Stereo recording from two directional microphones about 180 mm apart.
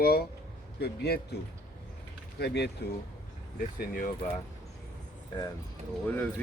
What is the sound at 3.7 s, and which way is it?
Speech, 55° left (ahead or behind).